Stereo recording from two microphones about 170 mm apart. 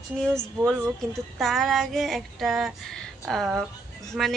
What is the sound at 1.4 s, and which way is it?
A woman's voice, centre (ahead or behind).